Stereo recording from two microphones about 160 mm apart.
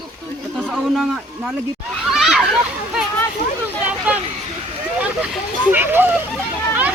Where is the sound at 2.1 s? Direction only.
Centre (ahead or behind).